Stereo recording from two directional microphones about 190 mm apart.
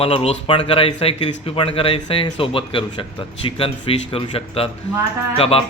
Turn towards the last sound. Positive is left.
turn(degrees=30)  # may be behind; listen again after turning